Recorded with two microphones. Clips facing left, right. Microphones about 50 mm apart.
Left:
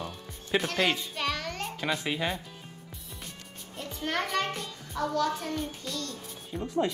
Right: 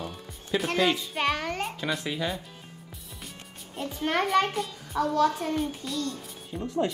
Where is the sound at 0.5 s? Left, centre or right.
Left.